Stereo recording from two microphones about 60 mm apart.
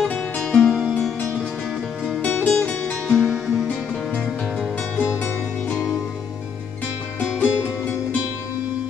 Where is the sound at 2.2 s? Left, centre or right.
Left.